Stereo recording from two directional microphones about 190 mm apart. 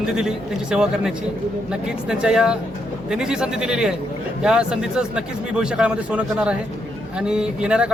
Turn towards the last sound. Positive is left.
turn(degrees=-5)  # may be behind; listen again after turning